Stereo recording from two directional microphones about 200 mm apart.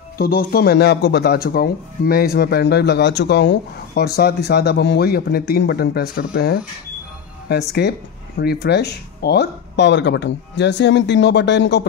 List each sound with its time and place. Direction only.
0.2 s speech: 50° left (ahead or behind)